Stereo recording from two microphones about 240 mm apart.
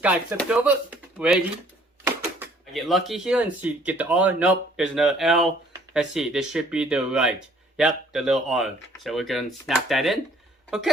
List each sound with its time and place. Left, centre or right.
0.0 s speech: centre